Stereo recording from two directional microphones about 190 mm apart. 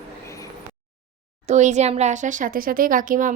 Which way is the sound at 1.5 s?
40° right (ahead or behind).